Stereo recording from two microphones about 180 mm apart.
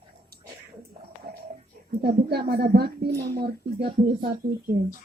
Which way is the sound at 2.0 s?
60° right (ahead or behind).